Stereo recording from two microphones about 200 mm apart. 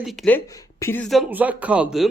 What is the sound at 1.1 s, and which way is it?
Speech, 5° right (ahead or behind).